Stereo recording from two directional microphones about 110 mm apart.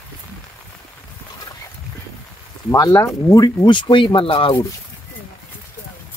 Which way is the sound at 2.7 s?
30° left (ahead or behind).